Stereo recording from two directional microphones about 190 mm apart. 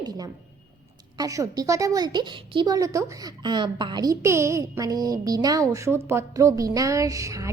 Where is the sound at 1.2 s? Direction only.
20° right (ahead or behind).